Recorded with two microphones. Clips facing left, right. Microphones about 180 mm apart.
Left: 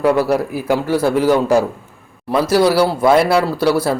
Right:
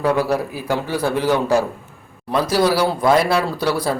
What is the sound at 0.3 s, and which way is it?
Speech, 15° left (ahead or behind).